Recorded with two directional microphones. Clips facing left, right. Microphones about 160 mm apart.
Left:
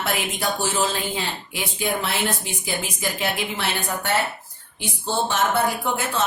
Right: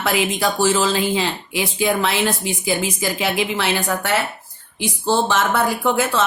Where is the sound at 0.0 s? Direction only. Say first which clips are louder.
Right 6 dB; 90° right.